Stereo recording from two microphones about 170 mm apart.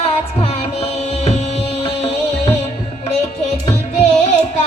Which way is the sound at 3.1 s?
40° left (ahead or behind).